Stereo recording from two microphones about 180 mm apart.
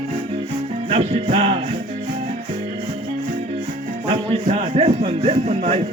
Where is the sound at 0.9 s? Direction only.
30° right (ahead or behind).